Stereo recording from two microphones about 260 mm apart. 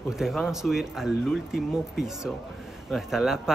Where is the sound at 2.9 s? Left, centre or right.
Centre.